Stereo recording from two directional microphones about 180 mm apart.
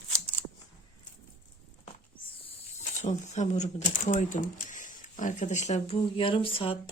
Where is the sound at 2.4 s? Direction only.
40° left (ahead or behind).